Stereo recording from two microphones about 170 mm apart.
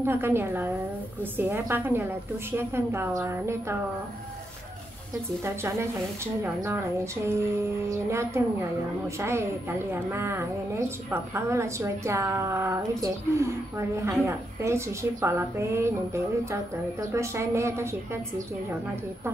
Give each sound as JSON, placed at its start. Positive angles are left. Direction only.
{"t": 0.0, "sound": "a woman's voice", "side_deg": -15}
{"t": 5.4, "sound": "a woman's voice", "side_deg": -15}
{"t": 9.8, "sound": "a woman's voice", "side_deg": -15}